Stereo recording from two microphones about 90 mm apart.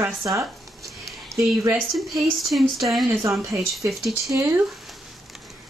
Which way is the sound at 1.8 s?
Centre (ahead or behind).